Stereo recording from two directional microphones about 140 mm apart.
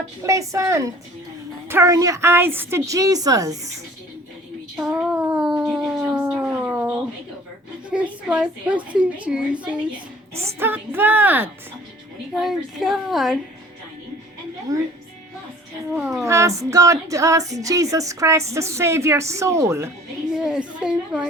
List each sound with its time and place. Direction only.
0.2 s speech: 20° right (ahead or behind)
4.8 s a sound: 5° right (ahead or behind)
7.9 s a woman's voice: 10° right (ahead or behind)
12.3 s a woman's voice: centre (ahead or behind)
14.7 s speech: 25° right (ahead or behind)
16.0 s a woman's voice: 5° right (ahead or behind)
16.2 s speech: 20° right (ahead or behind)
20.3 s a woman's voice: 5° right (ahead or behind)